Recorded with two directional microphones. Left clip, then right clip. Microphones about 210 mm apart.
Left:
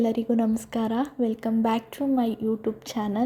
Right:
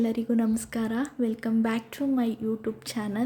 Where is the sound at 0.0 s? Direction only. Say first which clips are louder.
Left 3 dB; 15° left (ahead or behind).